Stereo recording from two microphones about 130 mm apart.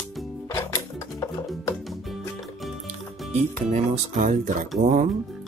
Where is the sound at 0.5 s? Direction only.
25° left (ahead or behind).